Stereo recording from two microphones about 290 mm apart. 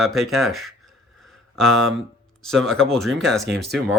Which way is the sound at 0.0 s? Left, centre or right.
Centre.